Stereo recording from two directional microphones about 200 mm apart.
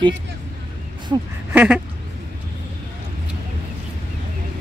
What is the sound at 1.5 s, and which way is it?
Duck, 5° right (ahead or behind).